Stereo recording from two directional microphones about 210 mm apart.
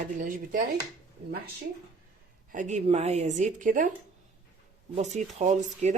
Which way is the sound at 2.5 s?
35° right (ahead or behind).